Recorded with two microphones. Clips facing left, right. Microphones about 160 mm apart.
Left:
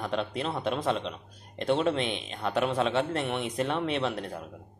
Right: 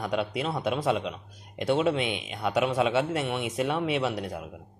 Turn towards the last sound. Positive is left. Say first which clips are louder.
# right 2 dB
turn(degrees=-5)  # may be behind; listen again after turning